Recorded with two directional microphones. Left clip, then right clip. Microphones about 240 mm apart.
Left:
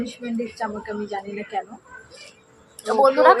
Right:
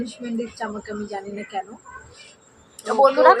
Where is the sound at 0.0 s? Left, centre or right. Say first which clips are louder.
Even; centre.